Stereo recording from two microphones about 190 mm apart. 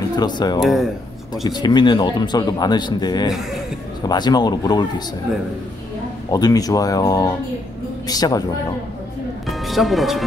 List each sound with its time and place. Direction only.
0.2 s speech: 20° left (ahead or behind)
0.6 s speech: centre (ahead or behind)
1.4 s speech: 20° left (ahead or behind)
3.3 s speech: centre (ahead or behind)
4.1 s speech: 20° left (ahead or behind)
6.3 s speech: 20° left (ahead or behind)
9.5 s speech: centre (ahead or behind)